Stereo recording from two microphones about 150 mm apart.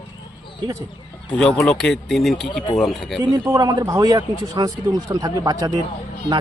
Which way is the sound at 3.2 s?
30° right (ahead or behind).